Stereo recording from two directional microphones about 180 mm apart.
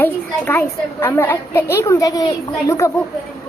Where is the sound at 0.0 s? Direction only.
10° left (ahead or behind).